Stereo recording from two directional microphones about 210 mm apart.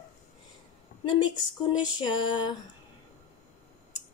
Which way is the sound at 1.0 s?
20° left (ahead or behind).